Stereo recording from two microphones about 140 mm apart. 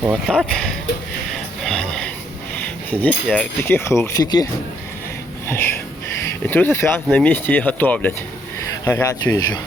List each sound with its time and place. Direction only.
0.0 s speech: 10° right (ahead or behind)
1.6 s a sound: 5° left (ahead or behind)
2.9 s speech: 10° left (ahead or behind); by 4.4 s 30° left (ahead or behind)
5.5 s wheeze: 15° left (ahead or behind)
6.2 s speech: 15° left (ahead or behind)
9.2 s speech: 30° left (ahead or behind)